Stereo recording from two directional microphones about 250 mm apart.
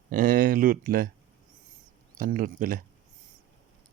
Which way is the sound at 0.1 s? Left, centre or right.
Right.